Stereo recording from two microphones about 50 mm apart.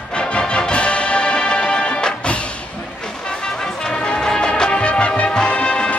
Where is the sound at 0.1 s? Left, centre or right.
Centre.